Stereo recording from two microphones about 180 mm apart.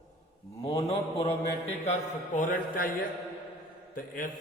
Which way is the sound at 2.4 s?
50° left (ahead or behind).